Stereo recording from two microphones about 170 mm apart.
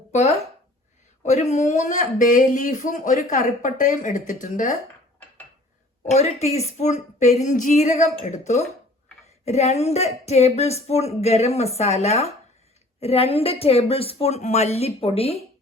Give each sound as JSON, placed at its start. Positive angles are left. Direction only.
{"t": 0.1, "sound": "speech", "side_deg": 40}
{"t": 6.0, "sound": "a woman's voice", "side_deg": 40}